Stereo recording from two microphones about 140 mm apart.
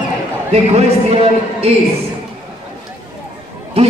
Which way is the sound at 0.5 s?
45° right (ahead or behind).